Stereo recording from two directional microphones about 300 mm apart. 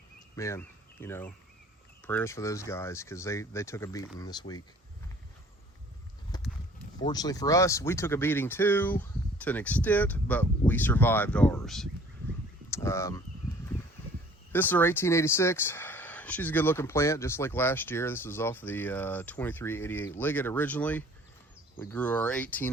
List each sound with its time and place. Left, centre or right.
0.3 s speech: centre
6.3 s a sound: centre
7.0 s speech: centre
14.5 s speech: centre